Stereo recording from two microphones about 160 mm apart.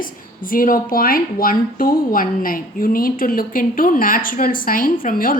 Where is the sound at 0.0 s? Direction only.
60° left (ahead or behind).